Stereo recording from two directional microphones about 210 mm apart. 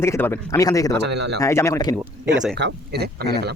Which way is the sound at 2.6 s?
55° right (ahead or behind).